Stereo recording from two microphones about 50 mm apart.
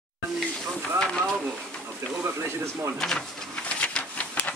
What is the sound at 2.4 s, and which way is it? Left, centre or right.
Speech, right.